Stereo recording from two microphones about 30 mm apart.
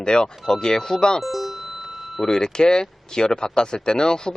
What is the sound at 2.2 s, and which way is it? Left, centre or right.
Speech, left.